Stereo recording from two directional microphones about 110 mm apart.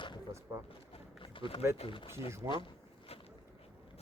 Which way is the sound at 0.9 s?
50° left (ahead or behind).